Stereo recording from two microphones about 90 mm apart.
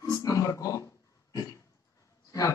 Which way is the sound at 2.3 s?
35° left (ahead or behind).